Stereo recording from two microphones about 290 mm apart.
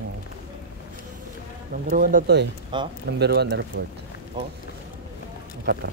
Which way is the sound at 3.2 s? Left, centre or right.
Right.